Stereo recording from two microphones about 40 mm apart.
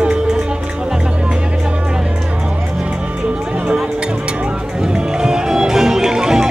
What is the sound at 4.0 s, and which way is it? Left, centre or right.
Music, right.